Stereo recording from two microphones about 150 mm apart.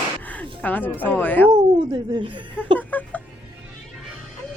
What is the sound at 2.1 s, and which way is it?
Speech, 35° right (ahead or behind).